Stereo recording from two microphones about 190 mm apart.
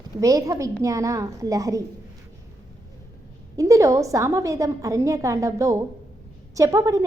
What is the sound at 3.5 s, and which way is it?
A woman's voice, 15° right (ahead or behind).